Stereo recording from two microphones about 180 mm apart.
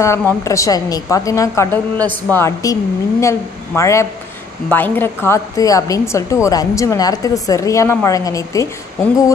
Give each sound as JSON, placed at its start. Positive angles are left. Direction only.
{"t": 0.0, "sound": "a woman's voice", "side_deg": 10}